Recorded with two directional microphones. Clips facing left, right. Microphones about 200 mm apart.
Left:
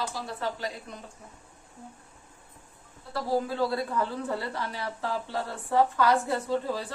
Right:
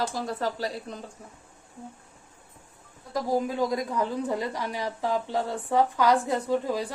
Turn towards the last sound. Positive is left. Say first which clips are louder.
# right 3 dB
turn(degrees=-15)  # may be behind; listen again after turning